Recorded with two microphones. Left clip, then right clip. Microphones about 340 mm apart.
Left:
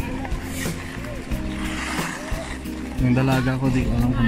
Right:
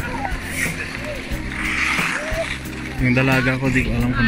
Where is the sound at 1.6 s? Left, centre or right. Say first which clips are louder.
Right 9 dB; left.